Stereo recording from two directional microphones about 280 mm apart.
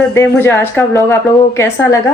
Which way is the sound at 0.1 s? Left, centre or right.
Centre.